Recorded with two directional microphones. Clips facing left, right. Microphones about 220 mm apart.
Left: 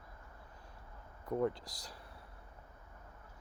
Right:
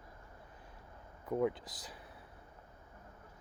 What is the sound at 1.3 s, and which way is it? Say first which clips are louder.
Speech: right 1 dB; 5° right (ahead or behind).